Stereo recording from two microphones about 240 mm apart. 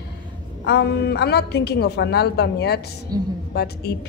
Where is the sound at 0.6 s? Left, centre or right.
Left.